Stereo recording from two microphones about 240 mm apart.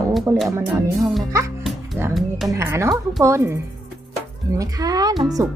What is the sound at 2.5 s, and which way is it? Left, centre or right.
Speech, centre.